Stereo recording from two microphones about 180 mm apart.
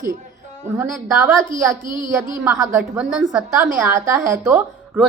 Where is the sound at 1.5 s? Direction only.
25° left (ahead or behind).